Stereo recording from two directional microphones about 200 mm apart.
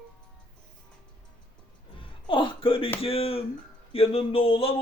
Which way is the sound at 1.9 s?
25° left (ahead or behind).